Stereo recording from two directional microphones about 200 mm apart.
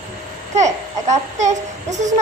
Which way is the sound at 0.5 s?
35° right (ahead or behind).